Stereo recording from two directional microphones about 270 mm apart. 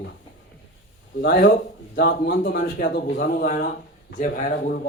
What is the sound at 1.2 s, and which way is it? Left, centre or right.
Speech, left.